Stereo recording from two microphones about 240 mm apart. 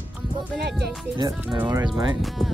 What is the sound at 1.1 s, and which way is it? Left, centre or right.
Speech, centre.